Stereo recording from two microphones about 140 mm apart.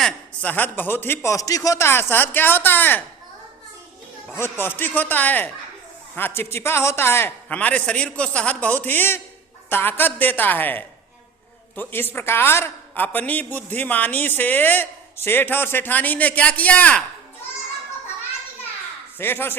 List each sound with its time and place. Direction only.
0.0 s a man's voice: 10° left (ahead or behind)
4.4 s a man's voice: 15° left (ahead or behind)
19.2 s a man's voice: 15° left (ahead or behind)